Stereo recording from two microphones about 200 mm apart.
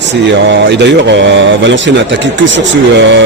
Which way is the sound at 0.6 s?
60° right (ahead or behind).